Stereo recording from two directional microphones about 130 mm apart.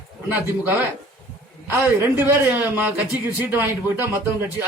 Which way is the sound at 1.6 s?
15° right (ahead or behind).